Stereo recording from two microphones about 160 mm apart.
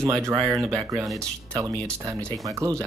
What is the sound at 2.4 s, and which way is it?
Speech, 20° right (ahead or behind).